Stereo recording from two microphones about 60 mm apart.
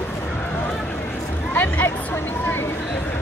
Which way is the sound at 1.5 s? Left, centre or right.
Left.